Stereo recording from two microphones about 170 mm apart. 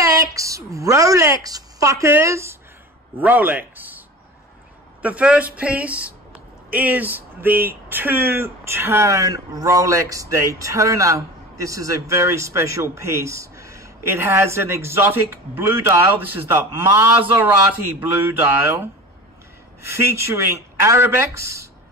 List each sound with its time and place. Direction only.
0.0 s a woman's voice: 20° right (ahead or behind)
5.0 s speech: 5° right (ahead or behind)